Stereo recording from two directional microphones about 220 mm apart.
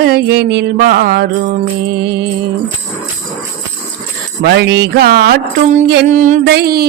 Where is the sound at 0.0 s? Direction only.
45° right (ahead or behind).